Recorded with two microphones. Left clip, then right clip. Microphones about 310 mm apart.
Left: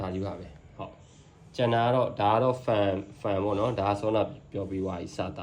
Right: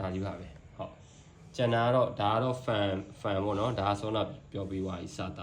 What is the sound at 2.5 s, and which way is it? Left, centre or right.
Speech, centre.